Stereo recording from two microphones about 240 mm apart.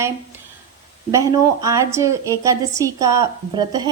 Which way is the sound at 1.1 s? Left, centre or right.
Centre.